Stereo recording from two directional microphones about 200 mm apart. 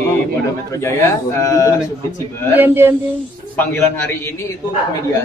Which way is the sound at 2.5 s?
10° right (ahead or behind).